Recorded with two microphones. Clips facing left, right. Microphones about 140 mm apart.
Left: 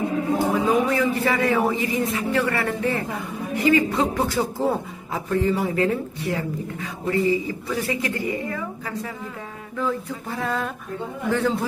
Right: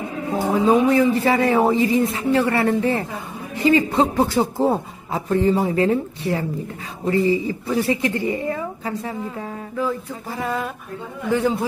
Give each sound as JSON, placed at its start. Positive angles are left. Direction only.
{"t": 0.7, "sound": "speech", "side_deg": -25}
{"t": 9.8, "sound": "a man's voice", "side_deg": -5}